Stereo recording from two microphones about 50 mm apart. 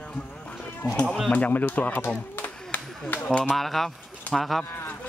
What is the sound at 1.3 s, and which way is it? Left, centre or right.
Speech, left.